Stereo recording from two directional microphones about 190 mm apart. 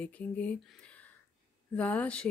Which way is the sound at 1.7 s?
5° left (ahead or behind).